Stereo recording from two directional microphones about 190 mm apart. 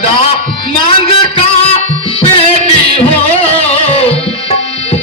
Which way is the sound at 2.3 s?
30° left (ahead or behind).